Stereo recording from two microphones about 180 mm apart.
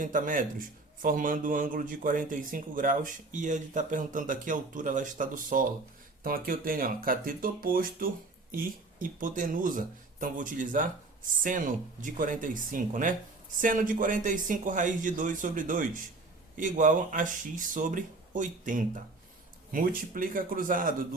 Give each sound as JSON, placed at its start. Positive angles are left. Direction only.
{"t": 0.0, "sound": "a man's voice", "side_deg": -50}